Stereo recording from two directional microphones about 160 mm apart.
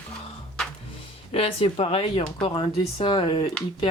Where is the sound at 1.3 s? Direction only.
35° left (ahead or behind).